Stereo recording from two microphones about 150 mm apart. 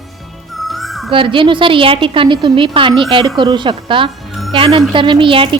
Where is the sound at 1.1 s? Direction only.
35° right (ahead or behind).